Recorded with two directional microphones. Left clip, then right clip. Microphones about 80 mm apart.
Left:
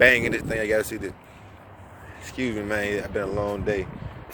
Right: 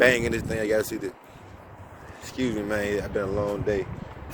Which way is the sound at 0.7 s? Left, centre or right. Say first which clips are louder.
Even; right.